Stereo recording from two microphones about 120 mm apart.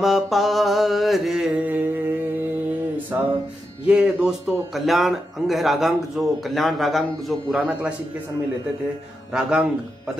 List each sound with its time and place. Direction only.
0.0 s mantra: centre (ahead or behind)
1.6 s mantra: 15° right (ahead or behind)
3.1 s music: 15° right (ahead or behind)
3.8 s a man's voice: 10° right (ahead or behind)
9.3 s a man's voice: 5° right (ahead or behind)